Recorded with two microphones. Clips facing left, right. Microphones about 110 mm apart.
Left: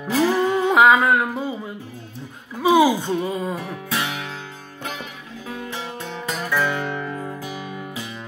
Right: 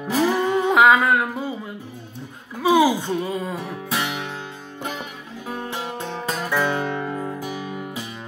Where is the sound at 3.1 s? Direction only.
15° left (ahead or behind).